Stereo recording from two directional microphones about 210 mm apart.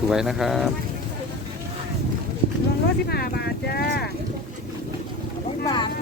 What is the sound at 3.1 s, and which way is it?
Speech, 50° left (ahead or behind).